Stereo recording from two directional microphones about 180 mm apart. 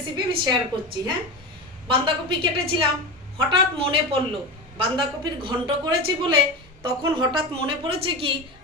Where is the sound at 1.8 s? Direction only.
25° right (ahead or behind).